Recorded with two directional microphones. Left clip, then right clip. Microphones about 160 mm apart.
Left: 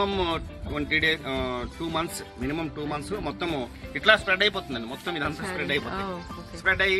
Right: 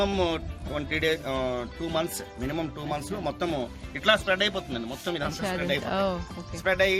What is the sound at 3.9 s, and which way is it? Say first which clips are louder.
Speech: left 3 dB; 80° right.